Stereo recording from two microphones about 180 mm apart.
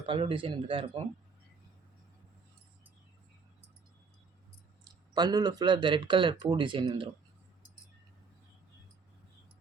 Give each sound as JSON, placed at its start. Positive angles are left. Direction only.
{"t": 0.0, "sound": "speech", "side_deg": -30}
{"t": 5.1, "sound": "speech", "side_deg": -20}